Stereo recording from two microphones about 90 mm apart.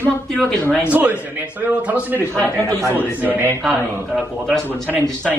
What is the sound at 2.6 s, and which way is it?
Speech, 35° right (ahead or behind).